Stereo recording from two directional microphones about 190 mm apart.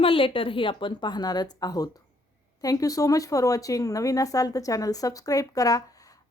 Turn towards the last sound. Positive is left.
turn(degrees=20)  # may be behind; listen again after turning